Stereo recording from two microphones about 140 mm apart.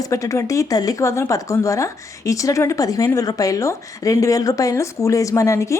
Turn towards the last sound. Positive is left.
turn(degrees=20)  # may be behind; listen again after turning